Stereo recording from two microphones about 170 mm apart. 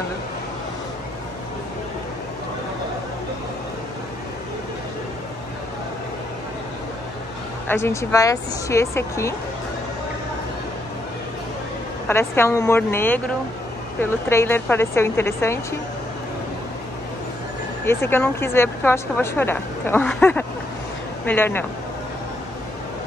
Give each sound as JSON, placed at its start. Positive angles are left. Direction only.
{"t": 7.6, "sound": "speech", "side_deg": 15}
{"t": 12.1, "sound": "speech", "side_deg": 15}
{"t": 17.8, "sound": "speech", "side_deg": 15}